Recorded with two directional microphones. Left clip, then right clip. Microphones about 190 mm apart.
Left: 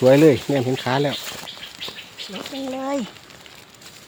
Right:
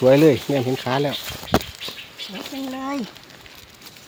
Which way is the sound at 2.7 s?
25° left (ahead or behind).